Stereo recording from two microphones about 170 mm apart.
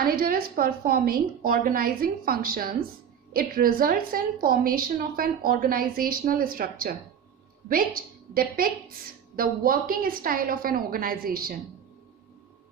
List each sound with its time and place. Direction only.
0.0 s a woman's voice: 60° right (ahead or behind)